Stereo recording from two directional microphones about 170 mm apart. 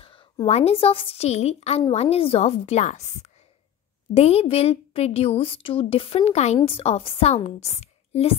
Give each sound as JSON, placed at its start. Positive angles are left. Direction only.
{"t": 0.0, "sound": "a woman's voice", "side_deg": 30}